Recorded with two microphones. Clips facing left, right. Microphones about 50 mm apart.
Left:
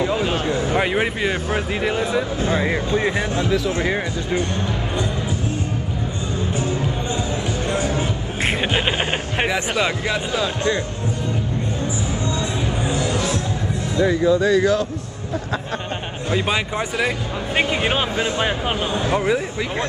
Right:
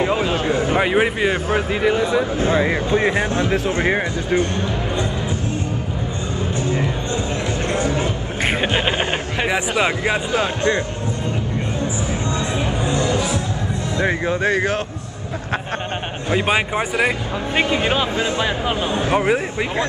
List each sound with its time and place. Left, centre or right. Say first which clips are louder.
0.0 s a sound: right 2 dB; right
0.7 s speech: right 3 dB; centre
2.3 s speech: right 3 dB; right
3.9 s speech: right 3 dB; right
7.7 s a sound: right 2 dB; right
9.5 s speech: right 4 dB; right
13.9 s speech: left 4 dB; right
16.3 s speech: right 3 dB; right
17.6 s speech: right 2 dB; left
19.0 s speech: right 2 dB; right